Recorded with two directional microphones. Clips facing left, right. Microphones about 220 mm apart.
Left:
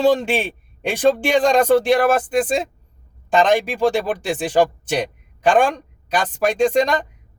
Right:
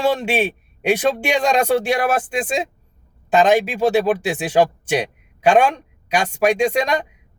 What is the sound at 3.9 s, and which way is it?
Speech, 10° right (ahead or behind).